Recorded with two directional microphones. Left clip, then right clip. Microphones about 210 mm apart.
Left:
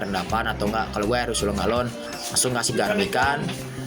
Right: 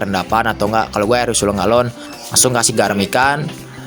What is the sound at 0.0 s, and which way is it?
Speech, 55° right (ahead or behind).